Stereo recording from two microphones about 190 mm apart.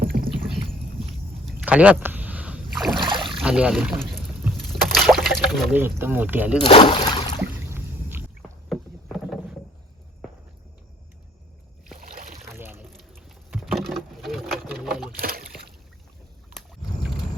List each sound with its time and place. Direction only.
0.0 s rowboat: 50° right (ahead or behind)
1.5 s a sound: 10° right (ahead or behind)
2.7 s boat: centre (ahead or behind)
3.0 s boat: 25° right (ahead or behind)
3.2 s speech: 5° right (ahead or behind)
4.5 s boat: centre (ahead or behind)
5.7 s speech: 10° right (ahead or behind)
6.6 s speech: 25° left (ahead or behind)
8.4 s rowboat: centre (ahead or behind)
11.9 s boat: 45° right (ahead or behind)
12.5 s a sound: 10° right (ahead or behind)
12.9 s sewing machine: centre (ahead or behind)
15.2 s rowboat: 50° right (ahead or behind)